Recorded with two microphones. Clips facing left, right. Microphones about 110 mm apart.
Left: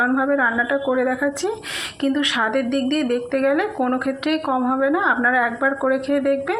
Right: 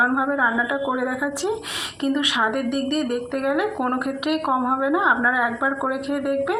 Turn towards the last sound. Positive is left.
turn(degrees=-20)  # may be behind; listen again after turning